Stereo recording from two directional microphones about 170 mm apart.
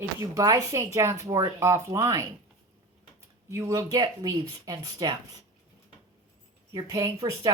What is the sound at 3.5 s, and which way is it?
Speech, 15° right (ahead or behind).